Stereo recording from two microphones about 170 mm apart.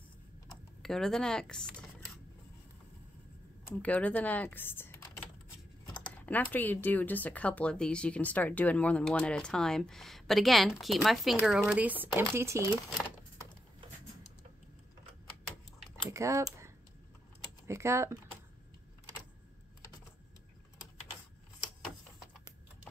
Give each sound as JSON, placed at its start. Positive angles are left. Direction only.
{"t": 0.8, "sound": "speech", "side_deg": 5}
{"t": 3.8, "sound": "speech", "side_deg": 10}
{"t": 16.1, "sound": "speech", "side_deg": -15}